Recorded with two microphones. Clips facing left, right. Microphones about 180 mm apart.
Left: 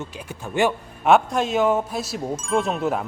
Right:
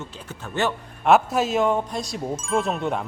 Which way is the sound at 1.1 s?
5° right (ahead or behind).